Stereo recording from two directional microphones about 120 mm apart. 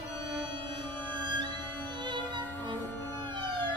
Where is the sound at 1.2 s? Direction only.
40° right (ahead or behind).